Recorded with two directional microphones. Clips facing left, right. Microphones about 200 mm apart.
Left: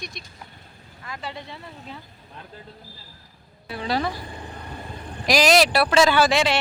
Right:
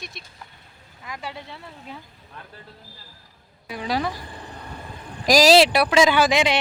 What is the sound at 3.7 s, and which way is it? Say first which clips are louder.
Speech: even; 10° right (ahead or behind).